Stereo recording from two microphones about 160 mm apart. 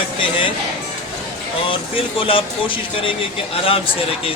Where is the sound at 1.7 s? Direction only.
35° left (ahead or behind).